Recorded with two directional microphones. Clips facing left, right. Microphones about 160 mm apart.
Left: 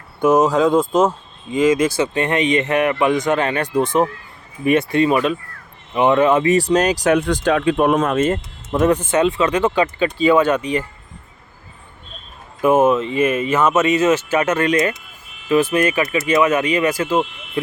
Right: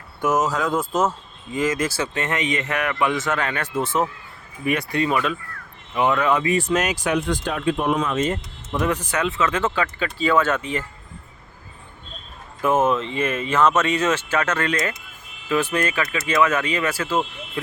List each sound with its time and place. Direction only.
0.2 s speech: 30° left (ahead or behind)
6.4 s speech: 40° left (ahead or behind)
7.1 s speech: 70° left (ahead or behind)
7.9 s speech: 55° left (ahead or behind)
8.9 s speech: 25° left (ahead or behind)
12.6 s speech: 10° left (ahead or behind)